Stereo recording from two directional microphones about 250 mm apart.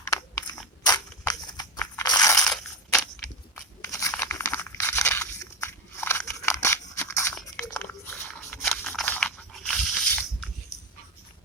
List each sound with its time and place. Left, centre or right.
0.1 s crunch: centre
0.9 s crushing: centre
3.8 s tearing: centre
7.7 s a sound: centre